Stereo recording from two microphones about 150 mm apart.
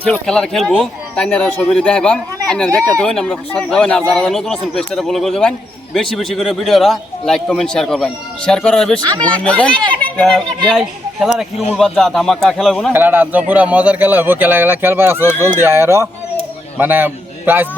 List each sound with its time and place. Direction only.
0.0 s a man's voice: 5° left (ahead or behind)
12.9 s a man's voice: 15° right (ahead or behind)